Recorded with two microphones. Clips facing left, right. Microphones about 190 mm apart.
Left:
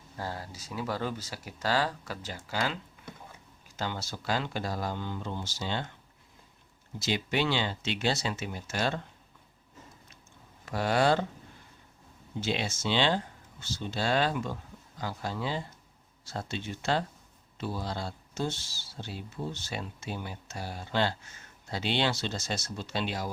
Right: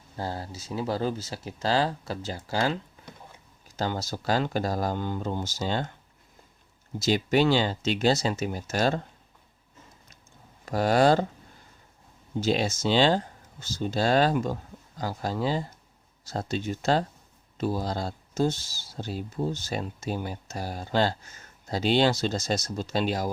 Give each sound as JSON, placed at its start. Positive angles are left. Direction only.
{"t": 0.2, "sound": "speech", "side_deg": -30}
{"t": 3.8, "sound": "speech", "side_deg": -40}
{"t": 7.0, "sound": "speech", "side_deg": -40}
{"t": 10.7, "sound": "speech", "side_deg": -40}
{"t": 12.4, "sound": "speech", "side_deg": -40}